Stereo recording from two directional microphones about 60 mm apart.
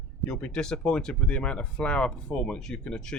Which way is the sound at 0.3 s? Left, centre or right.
Centre.